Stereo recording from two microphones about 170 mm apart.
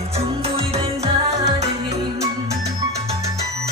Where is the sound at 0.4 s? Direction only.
35° right (ahead or behind).